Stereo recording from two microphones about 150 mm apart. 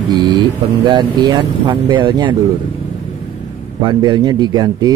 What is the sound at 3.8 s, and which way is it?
Speech, 30° right (ahead or behind).